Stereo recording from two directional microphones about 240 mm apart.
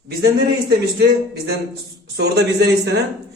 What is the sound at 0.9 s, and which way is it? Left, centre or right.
A man's voice, right.